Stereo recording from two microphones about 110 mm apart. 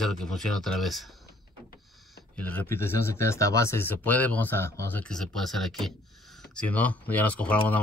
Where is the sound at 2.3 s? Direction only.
15° left (ahead or behind).